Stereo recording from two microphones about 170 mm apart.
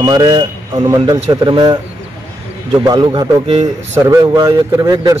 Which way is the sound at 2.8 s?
25° right (ahead or behind).